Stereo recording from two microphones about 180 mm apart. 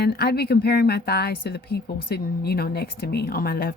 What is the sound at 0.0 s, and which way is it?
A woman's voice, 60° left (ahead or behind).